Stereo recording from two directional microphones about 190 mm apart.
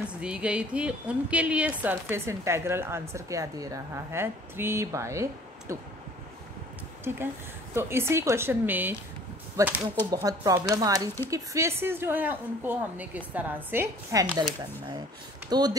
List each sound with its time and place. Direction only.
0.2 s a woman's voice: 5° right (ahead or behind)
7.1 s a woman's voice: 15° right (ahead or behind)
15.5 s speech: 20° right (ahead or behind)